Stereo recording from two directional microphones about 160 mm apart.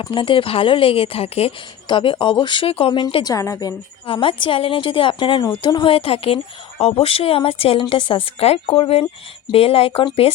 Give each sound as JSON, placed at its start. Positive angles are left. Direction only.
{"t": 0.0, "sound": "a woman's voice", "side_deg": 30}
{"t": 3.3, "sound": "a woman's voice", "side_deg": 20}
{"t": 4.0, "sound": "a woman's voice", "side_deg": 35}